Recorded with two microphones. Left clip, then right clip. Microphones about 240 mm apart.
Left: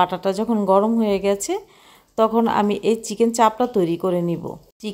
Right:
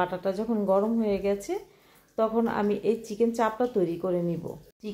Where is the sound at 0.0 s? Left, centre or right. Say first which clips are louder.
Left 8 dB; left.